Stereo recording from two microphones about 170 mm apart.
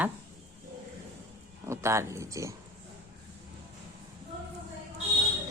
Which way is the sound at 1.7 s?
15° right (ahead or behind).